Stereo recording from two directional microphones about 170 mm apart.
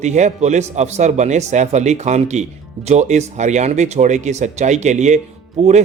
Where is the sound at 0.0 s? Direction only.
45° right (ahead or behind).